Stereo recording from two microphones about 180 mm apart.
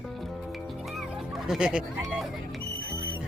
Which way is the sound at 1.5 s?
5° right (ahead or behind).